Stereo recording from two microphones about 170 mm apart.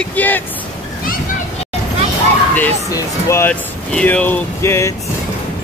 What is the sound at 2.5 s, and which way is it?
Speech, 15° left (ahead or behind).